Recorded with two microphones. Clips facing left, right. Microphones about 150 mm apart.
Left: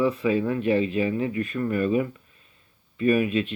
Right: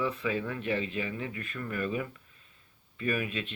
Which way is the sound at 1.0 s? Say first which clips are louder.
Left 11 dB; 25° left (ahead or behind).